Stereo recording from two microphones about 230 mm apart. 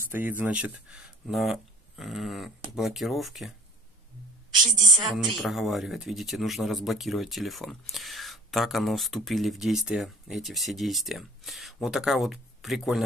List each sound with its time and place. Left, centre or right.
0.1 s speech: centre
4.6 s a woman's voice: centre
5.0 s speech: centre